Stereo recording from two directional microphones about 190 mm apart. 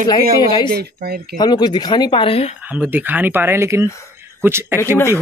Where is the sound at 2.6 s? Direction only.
10° right (ahead or behind).